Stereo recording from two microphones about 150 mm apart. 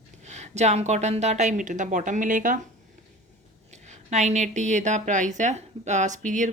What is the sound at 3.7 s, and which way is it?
Speech, 50° right (ahead or behind).